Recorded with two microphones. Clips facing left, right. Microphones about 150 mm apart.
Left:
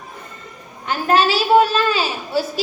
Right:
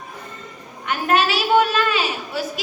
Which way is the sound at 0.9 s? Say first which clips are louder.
Left 3 dB; 30° left (ahead or behind).